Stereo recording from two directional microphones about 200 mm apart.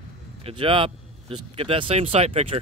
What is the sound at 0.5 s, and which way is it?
Speech, 25° right (ahead or behind).